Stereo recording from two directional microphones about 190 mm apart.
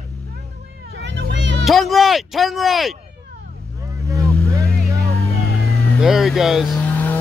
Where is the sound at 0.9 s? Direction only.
70° right (ahead or behind).